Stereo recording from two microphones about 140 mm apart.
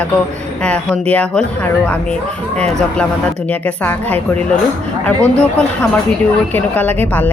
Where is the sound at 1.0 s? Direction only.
10° left (ahead or behind).